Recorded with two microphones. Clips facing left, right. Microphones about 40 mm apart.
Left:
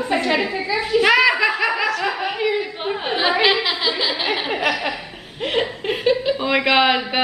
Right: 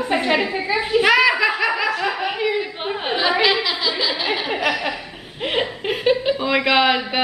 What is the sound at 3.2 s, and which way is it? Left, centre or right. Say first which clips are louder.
A woman's voice: left 1 dB; centre.